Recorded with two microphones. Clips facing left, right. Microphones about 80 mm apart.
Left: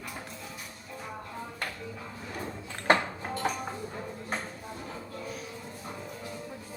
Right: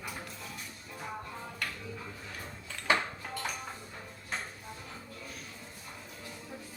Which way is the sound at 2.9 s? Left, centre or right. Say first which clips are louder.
Left 5 dB; left.